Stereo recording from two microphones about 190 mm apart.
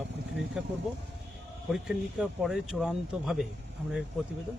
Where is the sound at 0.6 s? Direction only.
5° right (ahead or behind).